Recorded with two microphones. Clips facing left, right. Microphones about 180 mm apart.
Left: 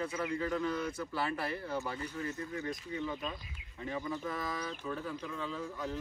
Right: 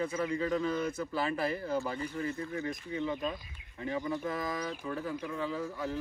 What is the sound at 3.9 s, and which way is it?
Speech, 15° right (ahead or behind).